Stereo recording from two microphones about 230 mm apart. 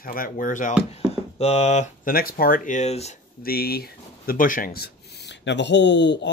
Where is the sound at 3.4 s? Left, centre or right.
Left.